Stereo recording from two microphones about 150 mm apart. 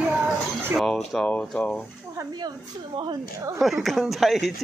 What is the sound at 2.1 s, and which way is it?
A woman's voice, 25° right (ahead or behind).